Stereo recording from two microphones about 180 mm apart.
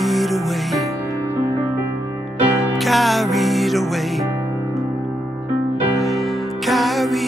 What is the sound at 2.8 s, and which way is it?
Music, centre (ahead or behind).